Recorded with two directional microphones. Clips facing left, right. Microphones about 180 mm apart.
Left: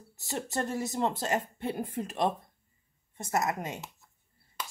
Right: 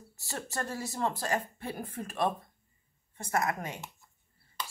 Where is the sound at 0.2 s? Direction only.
20° left (ahead or behind).